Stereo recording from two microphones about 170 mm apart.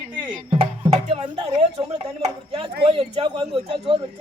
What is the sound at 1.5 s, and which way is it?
Speech, 35° right (ahead or behind).